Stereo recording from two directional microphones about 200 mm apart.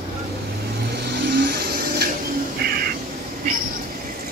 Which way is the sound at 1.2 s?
55° right (ahead or behind).